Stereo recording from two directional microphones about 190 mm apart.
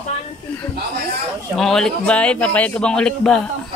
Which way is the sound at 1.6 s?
5° left (ahead or behind).